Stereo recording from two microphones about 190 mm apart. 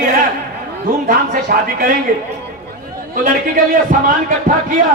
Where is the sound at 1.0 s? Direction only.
50° right (ahead or behind).